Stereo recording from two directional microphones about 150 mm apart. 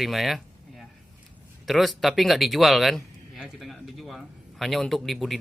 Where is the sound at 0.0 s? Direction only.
Centre (ahead or behind).